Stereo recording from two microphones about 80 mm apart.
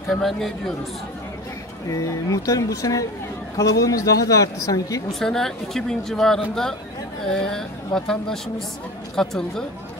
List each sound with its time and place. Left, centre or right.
0.1 s speech: centre
1.9 s a woman's voice: left
5.2 s a woman's voice: centre